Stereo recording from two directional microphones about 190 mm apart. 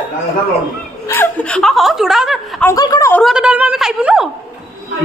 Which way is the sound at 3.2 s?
5° right (ahead or behind).